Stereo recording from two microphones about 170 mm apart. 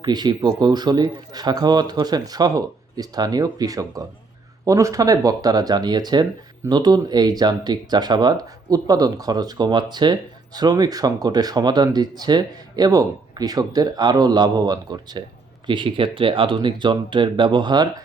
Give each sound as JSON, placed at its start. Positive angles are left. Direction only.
{"t": 0.0, "sound": "speech", "side_deg": -25}